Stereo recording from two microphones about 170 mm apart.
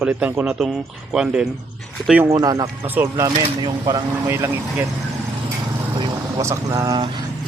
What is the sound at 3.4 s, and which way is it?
Speech, 30° right (ahead or behind).